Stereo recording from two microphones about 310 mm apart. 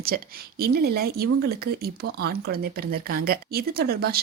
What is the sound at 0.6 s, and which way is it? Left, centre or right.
Speech, right.